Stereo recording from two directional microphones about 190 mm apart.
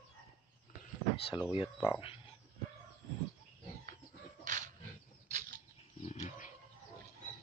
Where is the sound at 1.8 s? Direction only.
25° left (ahead or behind).